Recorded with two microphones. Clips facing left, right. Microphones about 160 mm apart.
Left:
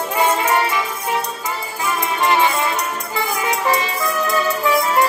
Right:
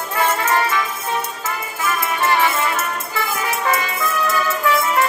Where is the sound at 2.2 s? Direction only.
20° left (ahead or behind).